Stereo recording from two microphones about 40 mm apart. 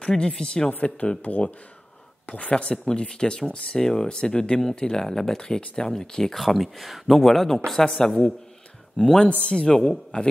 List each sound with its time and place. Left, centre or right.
0.0 s speech: centre
2.2 s speech: left
2.7 s speech: left
6.3 s speech: centre; by 10.3 s left